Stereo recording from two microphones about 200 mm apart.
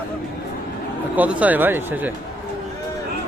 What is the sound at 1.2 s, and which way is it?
Speech, 5° right (ahead or behind).